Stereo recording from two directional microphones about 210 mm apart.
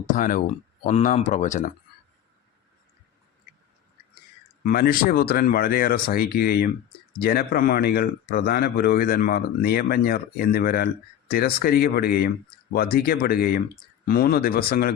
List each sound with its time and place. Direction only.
0.0 s speech: 40° left (ahead or behind)
4.6 s speech: 45° left (ahead or behind)